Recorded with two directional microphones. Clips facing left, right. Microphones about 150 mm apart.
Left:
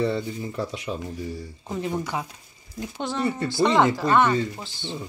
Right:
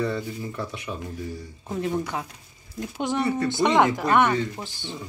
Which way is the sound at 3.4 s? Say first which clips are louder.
Left 1 dB; 20° right (ahead or behind).